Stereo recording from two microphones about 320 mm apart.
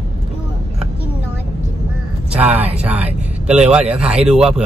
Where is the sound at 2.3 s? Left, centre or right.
Centre.